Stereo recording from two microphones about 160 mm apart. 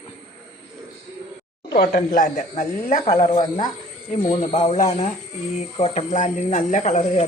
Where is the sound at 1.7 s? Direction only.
70° left (ahead or behind).